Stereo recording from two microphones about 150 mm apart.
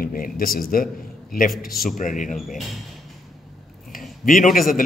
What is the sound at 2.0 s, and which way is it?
Speech, 60° left (ahead or behind).